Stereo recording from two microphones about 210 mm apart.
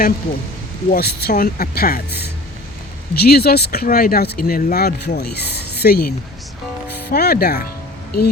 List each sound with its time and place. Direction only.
0.9 s speech: 50° left (ahead or behind)
3.2 s speech: 50° left (ahead or behind)